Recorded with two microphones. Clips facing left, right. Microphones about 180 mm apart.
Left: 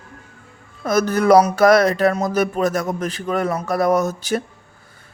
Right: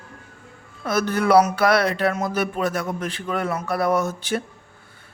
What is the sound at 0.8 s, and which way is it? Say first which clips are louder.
Speech: left 5 dB; 40° left (ahead or behind).